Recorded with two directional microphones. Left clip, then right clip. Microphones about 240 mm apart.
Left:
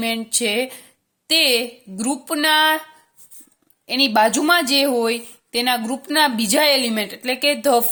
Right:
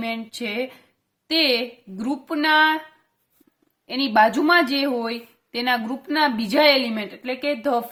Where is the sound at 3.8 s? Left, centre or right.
Left.